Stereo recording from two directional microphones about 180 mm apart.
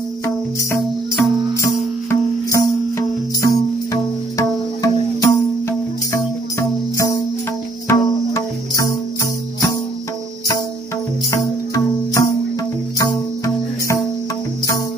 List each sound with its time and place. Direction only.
0.7 s music: 15° left (ahead or behind)
7.9 s music: 15° left (ahead or behind)
11.2 s music: 20° left (ahead or behind)